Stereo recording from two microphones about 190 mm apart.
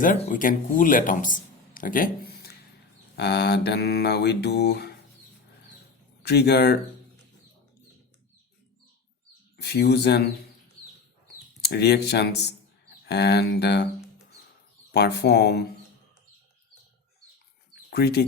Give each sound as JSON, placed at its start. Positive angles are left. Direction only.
{"t": 0.0, "sound": "a man's voice", "side_deg": 45}
{"t": 3.2, "sound": "mantra", "side_deg": 60}
{"t": 6.2, "sound": "mantra", "side_deg": 60}
{"t": 9.6, "sound": "mantra", "side_deg": 60}
{"t": 11.6, "sound": "mantra", "side_deg": 55}
{"t": 14.9, "sound": "mantra", "side_deg": 60}
{"t": 17.9, "sound": "mantra", "side_deg": 55}